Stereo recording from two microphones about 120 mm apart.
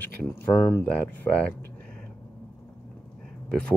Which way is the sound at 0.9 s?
10° left (ahead or behind).